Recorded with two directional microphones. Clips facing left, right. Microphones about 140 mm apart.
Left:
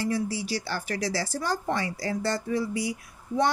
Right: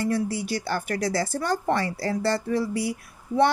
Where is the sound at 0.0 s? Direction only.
55° right (ahead or behind).